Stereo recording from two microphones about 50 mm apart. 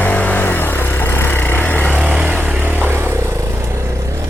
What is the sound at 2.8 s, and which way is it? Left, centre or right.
Vehicle, right.